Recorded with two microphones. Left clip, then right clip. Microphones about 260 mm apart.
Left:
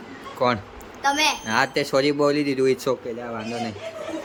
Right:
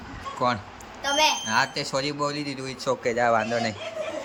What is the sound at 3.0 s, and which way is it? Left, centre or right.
Speech, centre.